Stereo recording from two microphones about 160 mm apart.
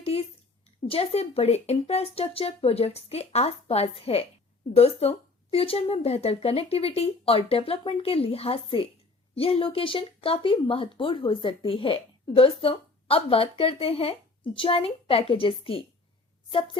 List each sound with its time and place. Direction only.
0.9 s a woman's voice: 40° left (ahead or behind)